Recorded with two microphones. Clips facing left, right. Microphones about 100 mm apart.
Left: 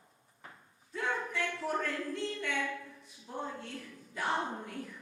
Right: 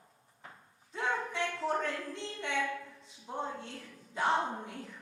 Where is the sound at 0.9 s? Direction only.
20° right (ahead or behind).